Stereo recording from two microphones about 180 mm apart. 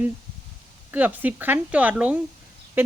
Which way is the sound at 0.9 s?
10° right (ahead or behind).